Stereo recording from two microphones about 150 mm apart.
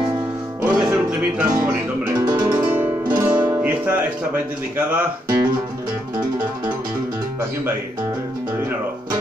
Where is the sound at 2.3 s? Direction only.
25° right (ahead or behind).